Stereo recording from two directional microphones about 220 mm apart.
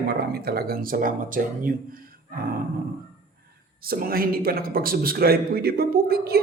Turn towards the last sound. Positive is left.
turn(degrees=-45)  # may be behind; listen again after turning